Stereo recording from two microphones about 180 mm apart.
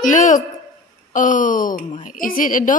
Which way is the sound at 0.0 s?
45° left (ahead or behind).